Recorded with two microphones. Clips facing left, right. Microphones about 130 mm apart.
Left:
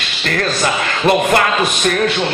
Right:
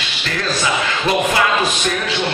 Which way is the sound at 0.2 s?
55° left (ahead or behind).